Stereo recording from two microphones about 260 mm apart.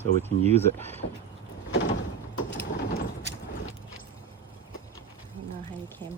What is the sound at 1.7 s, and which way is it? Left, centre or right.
Door, left.